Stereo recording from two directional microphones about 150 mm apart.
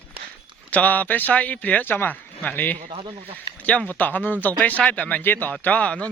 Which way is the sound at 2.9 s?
35° right (ahead or behind).